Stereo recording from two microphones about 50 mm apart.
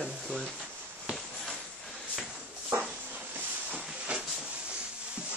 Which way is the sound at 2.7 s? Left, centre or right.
Right.